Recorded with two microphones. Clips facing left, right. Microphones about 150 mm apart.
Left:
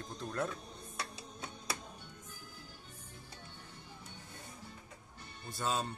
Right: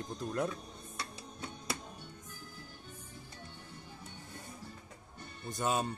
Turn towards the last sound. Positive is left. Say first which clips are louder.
# right 3 dB
turn(degrees=-15)  # may be behind; listen again after turning